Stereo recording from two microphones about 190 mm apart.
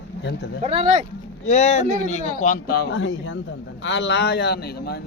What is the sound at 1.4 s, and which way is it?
A man's voice, 35° left (ahead or behind).